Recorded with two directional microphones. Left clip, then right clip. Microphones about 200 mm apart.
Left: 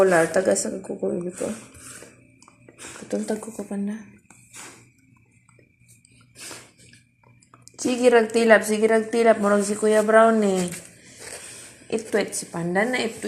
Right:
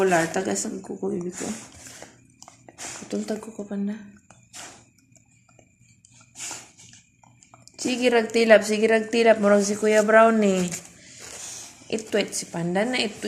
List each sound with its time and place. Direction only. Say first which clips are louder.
0.0 s a woman's voice: left 4 dB; 15° right (ahead or behind)
3.1 s a woman's voice: left 3 dB; 10° right (ahead or behind)
3.7 s speech: right 1 dB; centre (ahead or behind)
7.6 s a woman's voice: left 4 dB; 5° right (ahead or behind)